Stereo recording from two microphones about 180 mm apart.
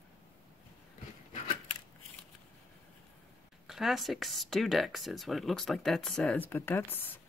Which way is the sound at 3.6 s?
Centre (ahead or behind).